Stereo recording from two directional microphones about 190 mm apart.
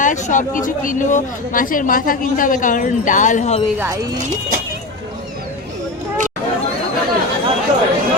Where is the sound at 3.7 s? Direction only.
15° right (ahead or behind).